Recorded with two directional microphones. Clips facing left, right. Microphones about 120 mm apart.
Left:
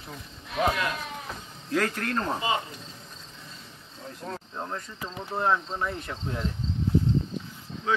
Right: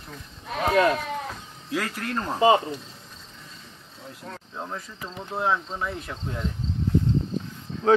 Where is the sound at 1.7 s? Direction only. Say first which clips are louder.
Left 2 dB; 5° right (ahead or behind).